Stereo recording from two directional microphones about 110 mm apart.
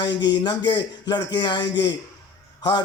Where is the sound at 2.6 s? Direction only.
40° left (ahead or behind).